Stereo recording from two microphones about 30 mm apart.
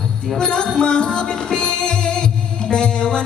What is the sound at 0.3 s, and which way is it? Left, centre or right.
Music, left.